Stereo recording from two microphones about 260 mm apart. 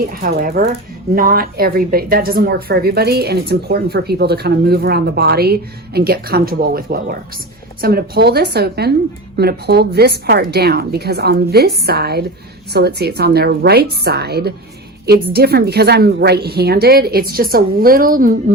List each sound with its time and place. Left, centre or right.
0.0 s speech: right